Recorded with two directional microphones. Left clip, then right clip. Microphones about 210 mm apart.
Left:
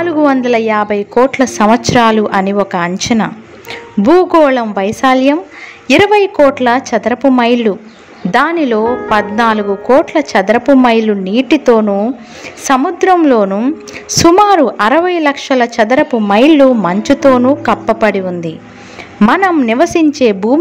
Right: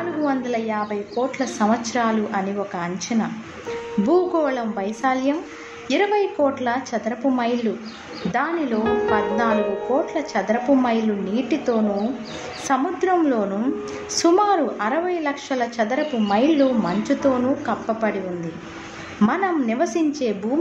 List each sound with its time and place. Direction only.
0.0 s a woman's voice: 40° left (ahead or behind)